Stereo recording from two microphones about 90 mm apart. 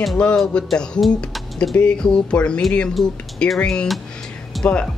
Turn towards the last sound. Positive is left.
turn(degrees=0)  # may be behind; listen again after turning